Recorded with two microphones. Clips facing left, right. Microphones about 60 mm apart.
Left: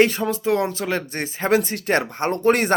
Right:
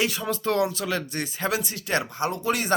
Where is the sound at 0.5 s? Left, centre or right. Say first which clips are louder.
Left 2 dB; left.